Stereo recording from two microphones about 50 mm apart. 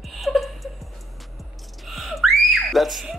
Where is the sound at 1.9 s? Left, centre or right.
Centre.